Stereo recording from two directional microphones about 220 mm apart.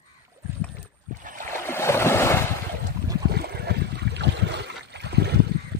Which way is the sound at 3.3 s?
45° right (ahead or behind).